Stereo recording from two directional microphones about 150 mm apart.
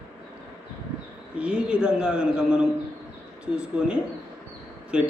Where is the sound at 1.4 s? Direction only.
5° right (ahead or behind).